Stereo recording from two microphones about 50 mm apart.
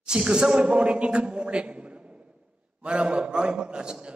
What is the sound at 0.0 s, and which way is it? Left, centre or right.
Speech, centre.